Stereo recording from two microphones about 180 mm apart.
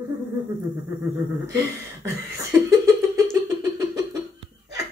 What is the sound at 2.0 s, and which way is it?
Beatboxing, 20° right (ahead or behind).